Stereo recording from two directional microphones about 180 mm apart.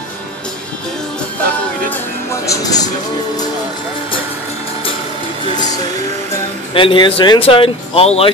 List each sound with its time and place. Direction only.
2.4 s speech: 20° left (ahead or behind)
6.7 s speech: 30° left (ahead or behind)